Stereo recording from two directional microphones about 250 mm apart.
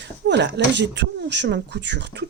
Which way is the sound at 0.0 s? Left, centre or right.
Right.